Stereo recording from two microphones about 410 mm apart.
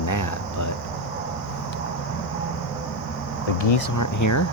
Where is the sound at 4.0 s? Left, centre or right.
Left.